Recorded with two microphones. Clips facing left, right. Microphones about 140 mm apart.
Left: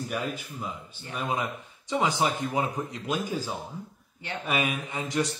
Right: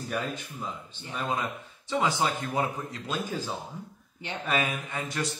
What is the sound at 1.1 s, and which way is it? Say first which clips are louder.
Speech: left 1 dB; 15° left (ahead or behind).